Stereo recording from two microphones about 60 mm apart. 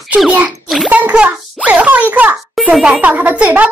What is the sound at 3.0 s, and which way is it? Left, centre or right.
Speech, right.